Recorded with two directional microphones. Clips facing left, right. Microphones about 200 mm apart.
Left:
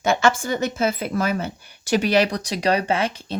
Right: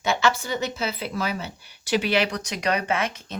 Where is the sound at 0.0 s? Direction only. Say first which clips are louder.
Left 4 dB; 50° left (ahead or behind).